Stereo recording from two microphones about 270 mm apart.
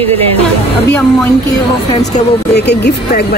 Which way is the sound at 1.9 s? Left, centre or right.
Left.